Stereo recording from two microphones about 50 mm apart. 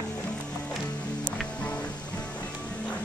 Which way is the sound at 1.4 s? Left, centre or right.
Left.